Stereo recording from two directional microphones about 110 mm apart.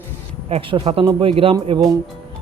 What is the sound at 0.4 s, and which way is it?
Speech, 65° right (ahead or behind).